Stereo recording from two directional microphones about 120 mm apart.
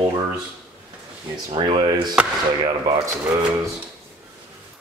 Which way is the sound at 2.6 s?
30° right (ahead or behind).